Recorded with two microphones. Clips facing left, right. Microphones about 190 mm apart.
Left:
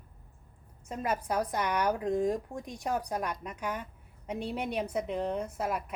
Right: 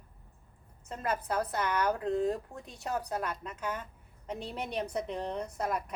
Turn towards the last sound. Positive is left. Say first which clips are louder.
# left 1 dB
turn(degrees=5)  # may be behind; listen again after turning